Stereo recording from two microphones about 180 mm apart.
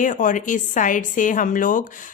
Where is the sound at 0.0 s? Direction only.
45° left (ahead or behind).